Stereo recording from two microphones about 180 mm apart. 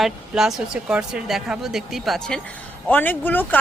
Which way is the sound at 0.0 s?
Centre (ahead or behind).